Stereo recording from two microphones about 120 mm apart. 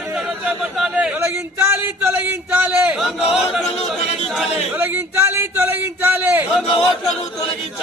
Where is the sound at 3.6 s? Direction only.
60° left (ahead or behind).